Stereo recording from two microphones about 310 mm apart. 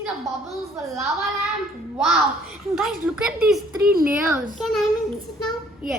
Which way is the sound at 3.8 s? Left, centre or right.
Right.